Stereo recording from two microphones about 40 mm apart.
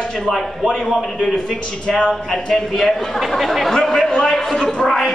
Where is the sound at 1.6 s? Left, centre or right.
Centre.